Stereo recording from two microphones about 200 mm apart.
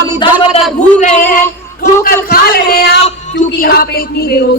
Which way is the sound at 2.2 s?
50° left (ahead or behind).